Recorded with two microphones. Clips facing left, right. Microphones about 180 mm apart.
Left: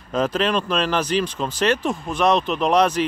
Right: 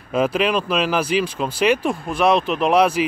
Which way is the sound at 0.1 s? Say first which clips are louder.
Right 2 dB; 10° right (ahead or behind).